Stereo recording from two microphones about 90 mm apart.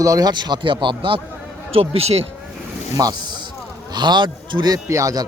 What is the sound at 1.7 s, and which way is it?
Speech, 90° right.